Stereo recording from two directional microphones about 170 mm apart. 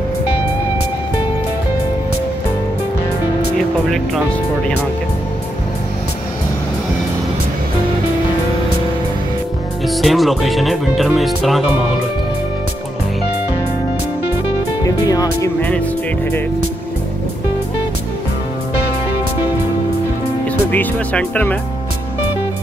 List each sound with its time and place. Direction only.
9.8 s speech: centre (ahead or behind)
15.0 s speech: 20° left (ahead or behind)
20.7 s speech: 10° left (ahead or behind)